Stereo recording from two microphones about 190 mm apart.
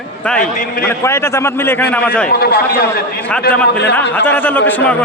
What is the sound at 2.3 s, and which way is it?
Speech, 55° left (ahead or behind).